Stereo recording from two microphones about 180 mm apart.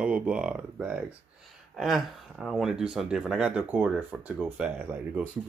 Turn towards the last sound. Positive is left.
turn(degrees=-10)  # may be behind; listen again after turning